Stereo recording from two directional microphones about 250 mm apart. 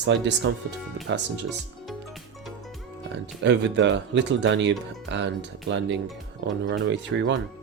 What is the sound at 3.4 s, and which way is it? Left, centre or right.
Speech, right.